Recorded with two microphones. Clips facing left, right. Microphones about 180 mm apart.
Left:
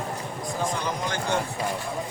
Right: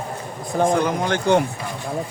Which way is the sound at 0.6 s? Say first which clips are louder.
Right 11 dB; 55° right (ahead or behind).